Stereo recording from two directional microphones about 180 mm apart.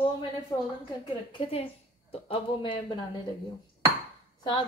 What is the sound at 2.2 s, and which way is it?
Speech, 30° left (ahead or behind).